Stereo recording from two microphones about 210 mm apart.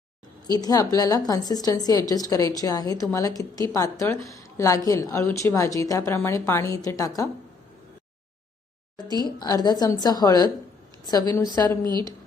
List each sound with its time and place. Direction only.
0.4 s speech: 20° left (ahead or behind)
9.2 s a woman's voice: 20° left (ahead or behind)
11.9 s a woman's voice: 20° right (ahead or behind)